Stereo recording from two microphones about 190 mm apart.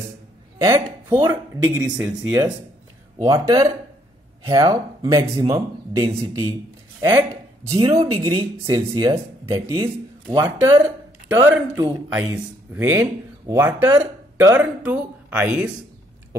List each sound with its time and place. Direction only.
0.6 s speech: 20° right (ahead or behind)
2.0 s speech: 5° right (ahead or behind)